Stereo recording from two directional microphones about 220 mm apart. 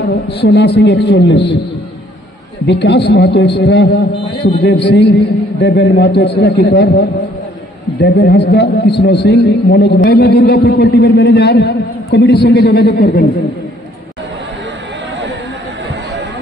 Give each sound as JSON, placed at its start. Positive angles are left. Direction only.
{"t": 0.0, "sound": "a man's voice", "side_deg": 50}
{"t": 2.6, "sound": "a man's voice", "side_deg": 50}